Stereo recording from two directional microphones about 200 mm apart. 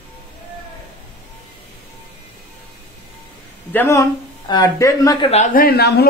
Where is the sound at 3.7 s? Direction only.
10° left (ahead or behind).